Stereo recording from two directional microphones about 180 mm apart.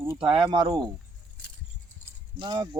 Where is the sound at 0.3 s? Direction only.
25° right (ahead or behind).